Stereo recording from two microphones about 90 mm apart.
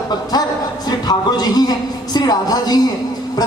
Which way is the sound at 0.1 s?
50° left (ahead or behind).